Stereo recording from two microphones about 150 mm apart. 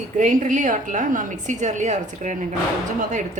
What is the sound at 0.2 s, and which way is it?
A woman's voice, 60° right (ahead or behind).